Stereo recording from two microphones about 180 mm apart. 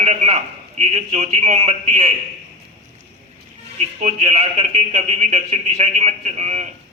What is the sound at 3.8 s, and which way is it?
A man's voice, 35° right (ahead or behind).